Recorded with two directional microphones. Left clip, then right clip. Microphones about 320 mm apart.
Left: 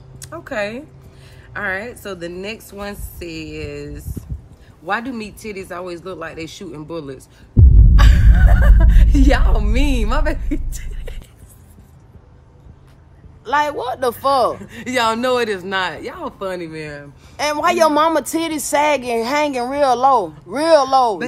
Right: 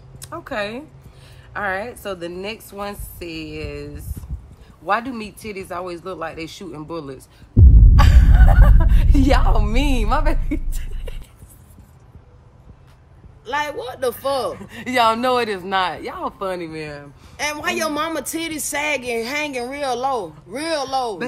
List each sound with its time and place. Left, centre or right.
0.2 s speech: centre
13.5 s speech: centre
14.6 s speech: centre
17.4 s speech: centre